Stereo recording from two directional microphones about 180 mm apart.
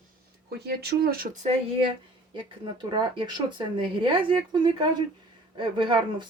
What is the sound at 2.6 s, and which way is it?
Speech, 25° right (ahead or behind).